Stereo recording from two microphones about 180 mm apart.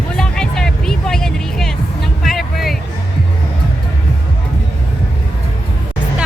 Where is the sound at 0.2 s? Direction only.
5° left (ahead or behind).